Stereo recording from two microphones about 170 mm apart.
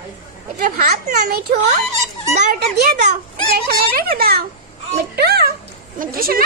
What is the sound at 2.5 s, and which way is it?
A child's voice, 65° right (ahead or behind).